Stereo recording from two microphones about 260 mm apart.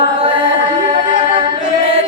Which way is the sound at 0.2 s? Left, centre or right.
Right.